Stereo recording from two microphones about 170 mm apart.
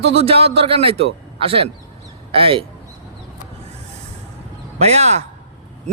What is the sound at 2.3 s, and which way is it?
Speech, 35° right (ahead or behind).